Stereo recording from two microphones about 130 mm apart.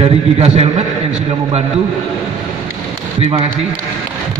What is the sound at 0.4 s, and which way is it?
Speech, 55° right (ahead or behind).